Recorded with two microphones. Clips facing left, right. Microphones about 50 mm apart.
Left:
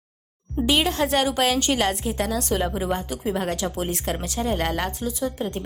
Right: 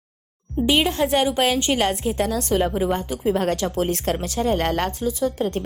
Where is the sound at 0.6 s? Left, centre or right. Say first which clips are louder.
Right 2 dB; centre; by 4.1 s right.